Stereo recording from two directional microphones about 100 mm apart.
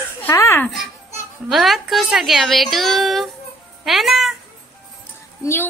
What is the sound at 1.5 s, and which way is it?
A woman's voice, centre (ahead or behind).